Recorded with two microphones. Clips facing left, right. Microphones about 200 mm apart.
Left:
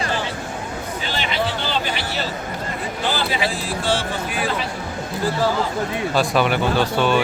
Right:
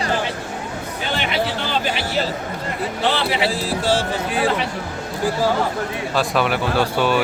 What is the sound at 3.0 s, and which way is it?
Speech, 70° right (ahead or behind).